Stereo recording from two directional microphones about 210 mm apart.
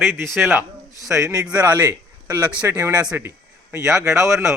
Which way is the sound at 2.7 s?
15° right (ahead or behind).